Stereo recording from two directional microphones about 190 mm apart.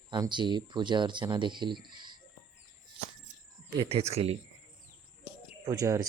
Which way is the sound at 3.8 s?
30° right (ahead or behind).